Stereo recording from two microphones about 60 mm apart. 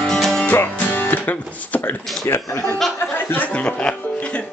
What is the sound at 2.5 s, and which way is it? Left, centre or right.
Speech, left.